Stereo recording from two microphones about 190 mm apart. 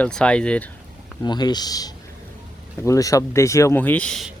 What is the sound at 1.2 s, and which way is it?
Speech, 20° left (ahead or behind).